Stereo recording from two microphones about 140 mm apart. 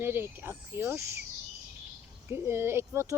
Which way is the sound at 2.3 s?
15° right (ahead or behind).